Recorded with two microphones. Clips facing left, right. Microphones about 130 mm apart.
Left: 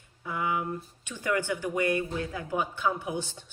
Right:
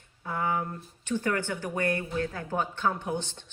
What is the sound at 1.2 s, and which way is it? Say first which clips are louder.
A woman's voice: left 5 dB; 15° left (ahead or behind).